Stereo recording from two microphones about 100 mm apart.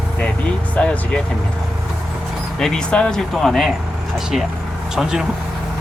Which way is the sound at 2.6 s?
5° left (ahead or behind).